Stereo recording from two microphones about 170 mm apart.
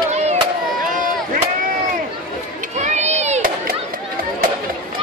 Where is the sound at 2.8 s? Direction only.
40° right (ahead or behind).